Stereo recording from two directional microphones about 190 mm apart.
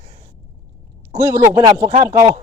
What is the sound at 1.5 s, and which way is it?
Speech, 20° right (ahead or behind).